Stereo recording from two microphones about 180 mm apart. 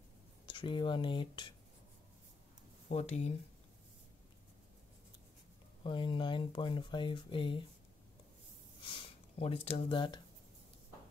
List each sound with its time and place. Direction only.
0.5 s speech: 25° left (ahead or behind)
2.9 s speech: 35° left (ahead or behind)
5.9 s speech: 25° left (ahead or behind)
8.8 s speech: 30° left (ahead or behind)